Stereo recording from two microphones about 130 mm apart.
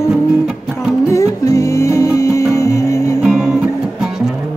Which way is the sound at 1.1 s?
25° left (ahead or behind).